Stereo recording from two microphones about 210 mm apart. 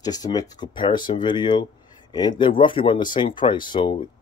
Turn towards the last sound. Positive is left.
turn(degrees=20)  # may be behind; listen again after turning